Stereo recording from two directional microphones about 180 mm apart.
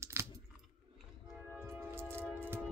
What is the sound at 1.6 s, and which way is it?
Music, 15° right (ahead or behind).